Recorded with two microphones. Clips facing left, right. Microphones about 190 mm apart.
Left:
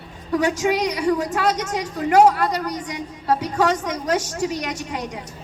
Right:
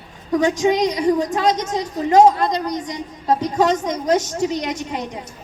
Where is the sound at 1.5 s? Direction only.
10° left (ahead or behind).